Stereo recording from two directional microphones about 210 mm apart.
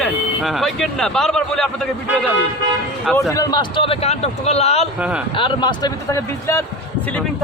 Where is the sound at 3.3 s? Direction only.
20° left (ahead or behind).